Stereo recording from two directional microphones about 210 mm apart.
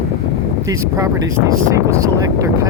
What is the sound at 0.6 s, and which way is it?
Speech, 15° right (ahead or behind).